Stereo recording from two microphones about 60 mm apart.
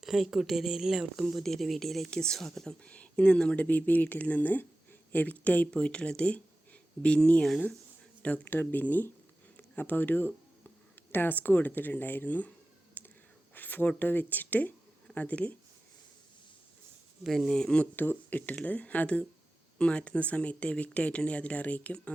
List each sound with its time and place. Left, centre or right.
0.0 s speech: centre
2.8 s speech: centre
8.4 s speech: left
13.0 s whispering: left
13.5 s speech: left
17.2 s speech: centre
17.5 s speech: centre
17.9 s speech: left